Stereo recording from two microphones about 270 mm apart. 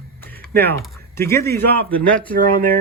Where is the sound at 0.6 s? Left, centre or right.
Centre.